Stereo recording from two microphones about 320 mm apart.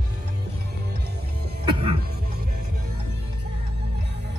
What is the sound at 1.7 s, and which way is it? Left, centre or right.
Music, centre.